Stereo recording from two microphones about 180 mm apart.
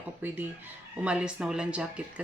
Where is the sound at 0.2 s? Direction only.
10° right (ahead or behind).